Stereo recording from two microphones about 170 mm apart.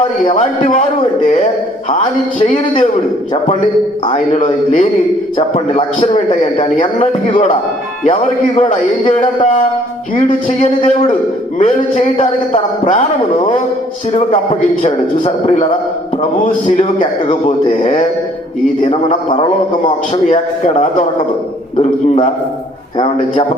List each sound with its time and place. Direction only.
0.3 s speech: 45° left (ahead or behind)
2.4 s a man's voice: 40° left (ahead or behind)
4.0 s a man's voice: 40° left (ahead or behind)
6.8 s a man's voice: 30° left (ahead or behind)
8.0 s a man's voice: 40° left (ahead or behind)
10.2 s speech: 45° left (ahead or behind)
14.1 s a man's voice: 35° left (ahead or behind)
17.4 s a man's voice: 40° left (ahead or behind)